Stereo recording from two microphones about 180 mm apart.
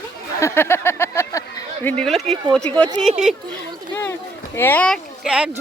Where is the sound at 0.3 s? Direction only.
15° left (ahead or behind).